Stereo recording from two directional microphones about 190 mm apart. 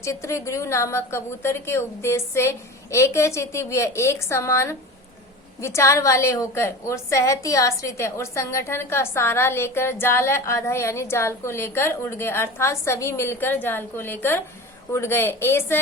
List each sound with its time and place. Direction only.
0.0 s a woman's voice: 15° left (ahead or behind)